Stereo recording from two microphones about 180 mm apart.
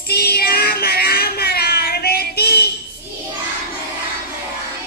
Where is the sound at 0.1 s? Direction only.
60° left (ahead or behind).